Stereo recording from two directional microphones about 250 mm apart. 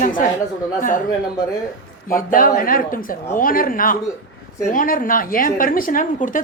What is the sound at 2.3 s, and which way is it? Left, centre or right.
A woman's voice, left.